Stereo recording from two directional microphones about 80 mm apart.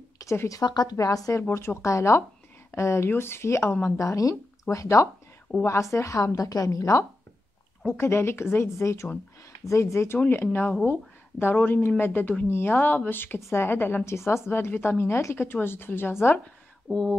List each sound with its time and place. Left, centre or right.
0.2 s speech: left
0.7 s speech: left
0.9 s speech: left
1.5 s a woman's voice: left
8.0 s a woman's voice: left
16.9 s speech: centre